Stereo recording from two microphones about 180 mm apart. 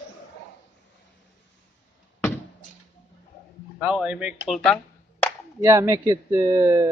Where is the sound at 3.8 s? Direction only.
5° right (ahead or behind).